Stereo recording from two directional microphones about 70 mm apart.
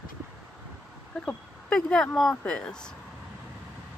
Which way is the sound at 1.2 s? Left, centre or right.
Centre.